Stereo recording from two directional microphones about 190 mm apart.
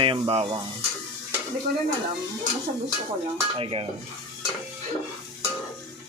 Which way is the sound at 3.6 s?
30° right (ahead or behind).